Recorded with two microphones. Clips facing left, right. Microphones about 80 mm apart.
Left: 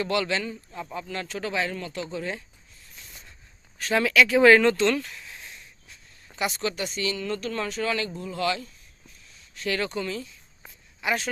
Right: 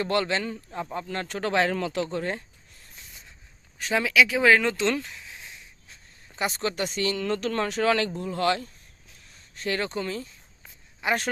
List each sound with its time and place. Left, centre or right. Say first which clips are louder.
0.0 s a man's voice: right 1 dB; right
0.5 s speech: right 3 dB; right
0.9 s speech: even; right
3.8 s speech: left 1 dB; centre
4.9 s speech: left 2 dB; right
5.1 s a sound: even; centre
6.3 s speech: even; right
9.6 s a man's voice: even; right